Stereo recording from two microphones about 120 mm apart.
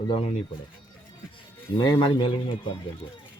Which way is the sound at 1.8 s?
35° left (ahead or behind).